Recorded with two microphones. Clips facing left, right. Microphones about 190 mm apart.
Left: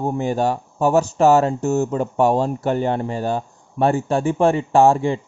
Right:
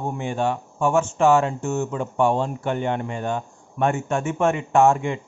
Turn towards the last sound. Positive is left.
turn(degrees=35)  # may be behind; listen again after turning